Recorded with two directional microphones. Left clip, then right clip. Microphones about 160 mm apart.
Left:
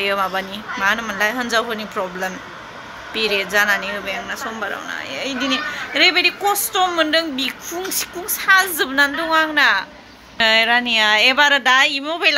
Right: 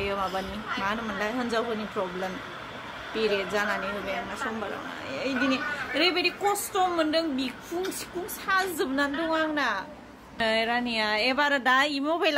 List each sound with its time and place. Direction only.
0.2 s speech: 20° left (ahead or behind)
1.1 s a woman's voice: centre (ahead or behind)
2.0 s speech: 15° left (ahead or behind)
3.2 s a woman's voice: 5° right (ahead or behind)
5.1 s a woman's voice: 5° right (ahead or behind)
11.6 s a woman's voice: 25° right (ahead or behind)